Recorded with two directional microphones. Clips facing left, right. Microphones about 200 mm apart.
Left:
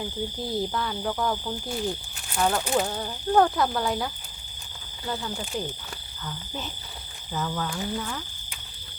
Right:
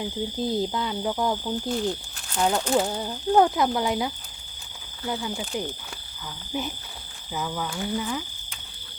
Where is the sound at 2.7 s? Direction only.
15° right (ahead or behind).